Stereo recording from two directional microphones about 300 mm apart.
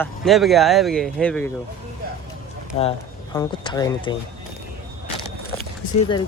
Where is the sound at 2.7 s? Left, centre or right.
Centre.